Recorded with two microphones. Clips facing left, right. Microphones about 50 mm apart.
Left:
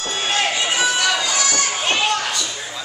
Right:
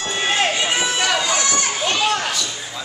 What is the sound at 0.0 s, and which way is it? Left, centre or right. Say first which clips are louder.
Run: right 1 dB; centre.